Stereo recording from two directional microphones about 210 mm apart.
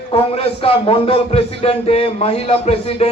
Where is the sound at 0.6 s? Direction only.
25° left (ahead or behind).